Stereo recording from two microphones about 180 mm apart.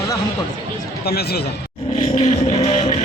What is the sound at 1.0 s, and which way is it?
Speech, 60° left (ahead or behind).